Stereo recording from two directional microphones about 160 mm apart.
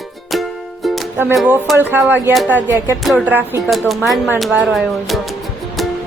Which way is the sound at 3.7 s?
Centre (ahead or behind).